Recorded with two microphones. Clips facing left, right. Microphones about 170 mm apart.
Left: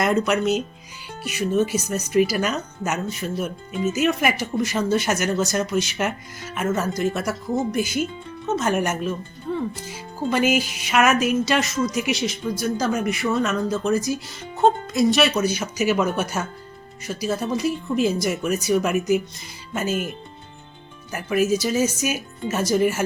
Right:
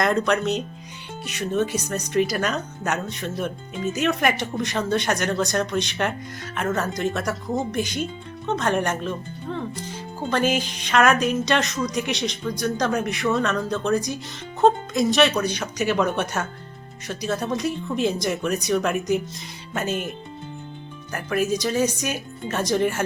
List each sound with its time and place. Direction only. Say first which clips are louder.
0.0 s speech: left 1 dB; 5° left (ahead or behind)
21.1 s speech: left 3 dB; 5° left (ahead or behind)